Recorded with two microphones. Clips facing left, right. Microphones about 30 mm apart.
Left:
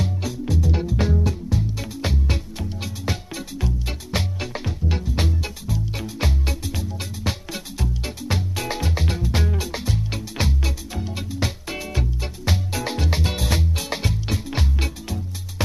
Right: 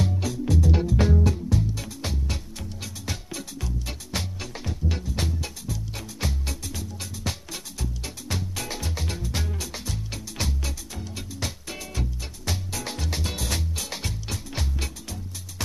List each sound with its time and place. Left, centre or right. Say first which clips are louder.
0.0 s music: even; centre